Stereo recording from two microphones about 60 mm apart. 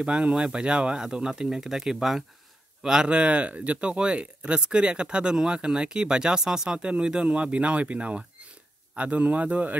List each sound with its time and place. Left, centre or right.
0.0 s speech: centre